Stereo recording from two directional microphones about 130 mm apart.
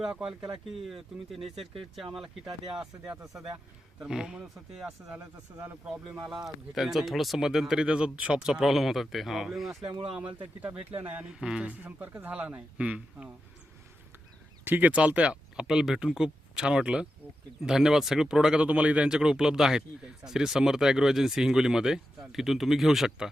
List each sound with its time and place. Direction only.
0.0 s speech: 5° right (ahead or behind)
5.2 s speech: 25° right (ahead or behind)
5.8 s speech: 5° right (ahead or behind)
9.8 s speech: 40° right (ahead or behind)
11.1 s speech: 5° right (ahead or behind)
14.6 s speech: 15° right (ahead or behind)